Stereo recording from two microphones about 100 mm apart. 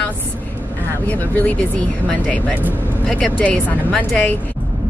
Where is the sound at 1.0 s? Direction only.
15° left (ahead or behind).